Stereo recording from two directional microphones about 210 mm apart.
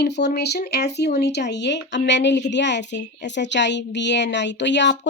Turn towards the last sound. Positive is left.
turn(degrees=55)  # may be behind; listen again after turning